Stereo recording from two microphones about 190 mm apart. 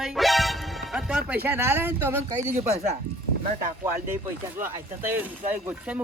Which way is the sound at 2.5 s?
35° right (ahead or behind).